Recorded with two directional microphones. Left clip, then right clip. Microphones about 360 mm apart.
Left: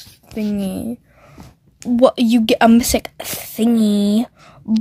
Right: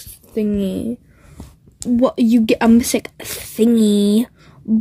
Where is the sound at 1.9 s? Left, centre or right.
Centre.